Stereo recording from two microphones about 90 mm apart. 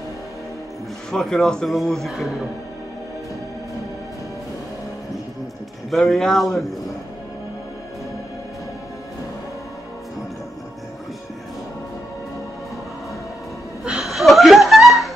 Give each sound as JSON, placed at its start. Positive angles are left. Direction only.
{"t": 1.1, "sound": "speech", "side_deg": 5}
{"t": 5.9, "sound": "speech", "side_deg": 0}
{"t": 13.8, "sound": "chuckle", "side_deg": -5}